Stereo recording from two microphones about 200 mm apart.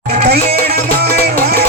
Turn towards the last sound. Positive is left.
turn(degrees=-50)  # may be behind; listen again after turning